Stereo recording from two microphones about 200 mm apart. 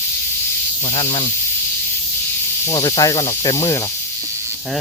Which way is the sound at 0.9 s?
30° left (ahead or behind).